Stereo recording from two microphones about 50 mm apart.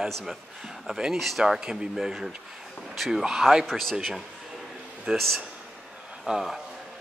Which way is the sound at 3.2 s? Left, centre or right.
Centre.